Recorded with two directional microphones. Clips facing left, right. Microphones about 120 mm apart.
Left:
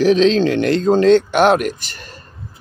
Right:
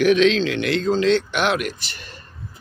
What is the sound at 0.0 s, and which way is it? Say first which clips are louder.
Speech: left 3 dB; 35° left (ahead or behind).